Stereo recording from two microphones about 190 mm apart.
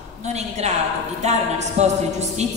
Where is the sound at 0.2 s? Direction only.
35° right (ahead or behind).